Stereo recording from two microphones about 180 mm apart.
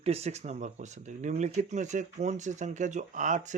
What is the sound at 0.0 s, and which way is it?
Speech, 35° right (ahead or behind).